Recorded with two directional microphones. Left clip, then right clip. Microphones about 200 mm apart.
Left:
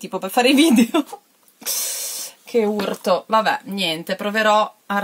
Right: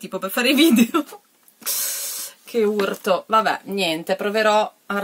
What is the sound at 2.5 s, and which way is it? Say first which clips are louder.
Speech: even; 5° right (ahead or behind).